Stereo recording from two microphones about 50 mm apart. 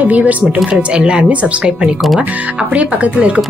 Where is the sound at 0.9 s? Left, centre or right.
Centre.